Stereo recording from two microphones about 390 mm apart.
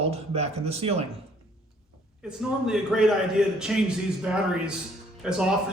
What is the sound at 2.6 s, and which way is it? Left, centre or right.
Speech, centre.